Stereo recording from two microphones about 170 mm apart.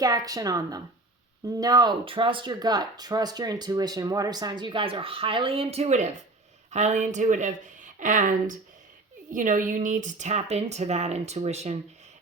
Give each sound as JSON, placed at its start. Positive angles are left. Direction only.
{"t": 0.0, "sound": "a woman's voice", "side_deg": -20}